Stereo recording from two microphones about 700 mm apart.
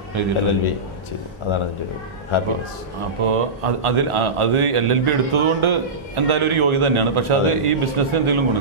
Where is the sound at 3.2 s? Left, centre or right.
Right.